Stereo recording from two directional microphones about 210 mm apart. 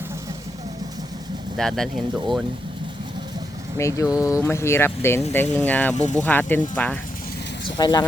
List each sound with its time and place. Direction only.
1.5 s speech: centre (ahead or behind)
3.8 s speech: 15° left (ahead or behind)
5.9 s speech: 35° left (ahead or behind)
6.2 s speech: 10° left (ahead or behind)
7.8 s speech: 20° left (ahead or behind)